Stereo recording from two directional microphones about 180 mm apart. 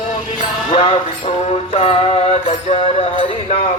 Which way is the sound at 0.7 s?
30° left (ahead or behind).